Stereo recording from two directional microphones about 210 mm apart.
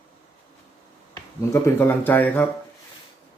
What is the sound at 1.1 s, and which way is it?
Speech, 15° left (ahead or behind).